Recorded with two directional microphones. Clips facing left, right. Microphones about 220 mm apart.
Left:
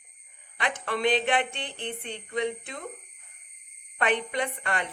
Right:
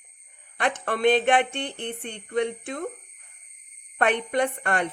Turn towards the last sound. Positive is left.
turn(degrees=-50)  # may be behind; listen again after turning